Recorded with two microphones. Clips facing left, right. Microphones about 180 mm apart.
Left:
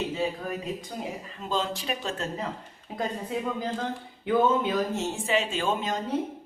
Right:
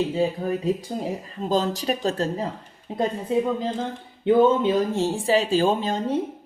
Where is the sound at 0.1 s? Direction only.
30° right (ahead or behind).